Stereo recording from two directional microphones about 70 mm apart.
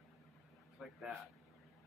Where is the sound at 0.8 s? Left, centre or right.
Centre.